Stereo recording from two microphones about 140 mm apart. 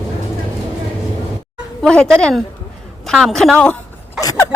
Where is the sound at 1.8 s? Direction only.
5° left (ahead or behind).